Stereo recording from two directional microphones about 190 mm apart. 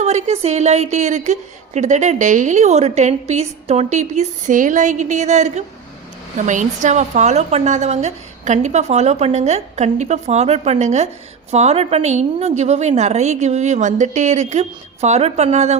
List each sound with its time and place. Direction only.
0.0 s a woman's voice: 35° right (ahead or behind)